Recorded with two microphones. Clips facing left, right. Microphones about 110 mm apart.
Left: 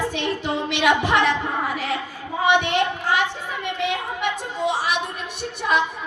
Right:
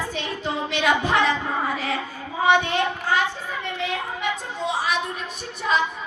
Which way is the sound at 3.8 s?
75° left (ahead or behind).